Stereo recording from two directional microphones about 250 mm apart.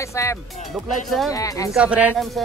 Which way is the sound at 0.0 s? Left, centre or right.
Centre.